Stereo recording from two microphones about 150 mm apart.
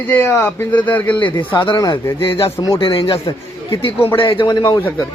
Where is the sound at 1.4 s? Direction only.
35° left (ahead or behind).